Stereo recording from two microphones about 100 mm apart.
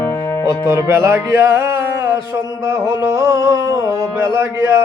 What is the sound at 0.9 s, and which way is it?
Music, 30° right (ahead or behind).